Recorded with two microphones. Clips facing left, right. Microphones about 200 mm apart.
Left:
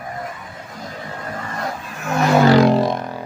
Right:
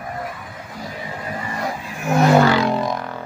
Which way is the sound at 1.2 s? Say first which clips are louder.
Right 1 dB; 10° right (ahead or behind).